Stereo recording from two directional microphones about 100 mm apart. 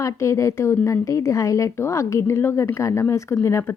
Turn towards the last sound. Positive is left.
turn(degrees=30)  # may be behind; listen again after turning